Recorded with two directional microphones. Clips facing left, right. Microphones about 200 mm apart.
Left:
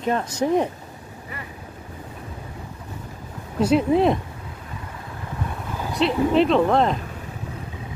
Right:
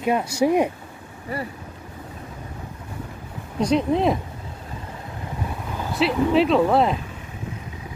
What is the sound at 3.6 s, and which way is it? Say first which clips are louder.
Speech: left 2 dB; 5° left (ahead or behind).